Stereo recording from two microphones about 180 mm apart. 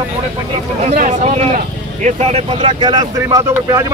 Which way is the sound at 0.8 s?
40° right (ahead or behind).